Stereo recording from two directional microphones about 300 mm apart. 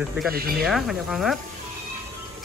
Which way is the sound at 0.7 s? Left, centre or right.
Centre.